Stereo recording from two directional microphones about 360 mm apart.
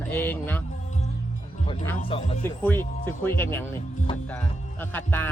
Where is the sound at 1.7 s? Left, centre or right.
Centre.